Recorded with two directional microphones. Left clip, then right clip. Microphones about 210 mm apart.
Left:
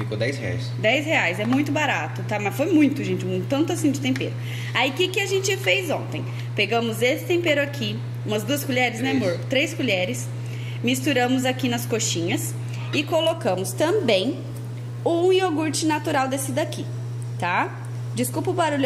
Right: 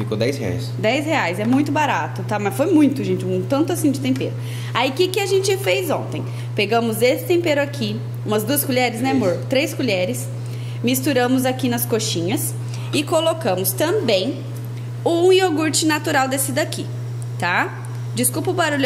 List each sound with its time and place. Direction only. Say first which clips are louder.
0.1 s speech: right 5 dB; 50° right (ahead or behind)
0.8 s a woman's voice: right 1 dB; 5° right (ahead or behind)
15.0 s a woman's voice: right 4 dB; 5° right (ahead or behind)